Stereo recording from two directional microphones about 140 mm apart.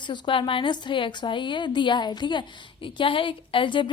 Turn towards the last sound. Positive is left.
turn(degrees=35)  # may be behind; listen again after turning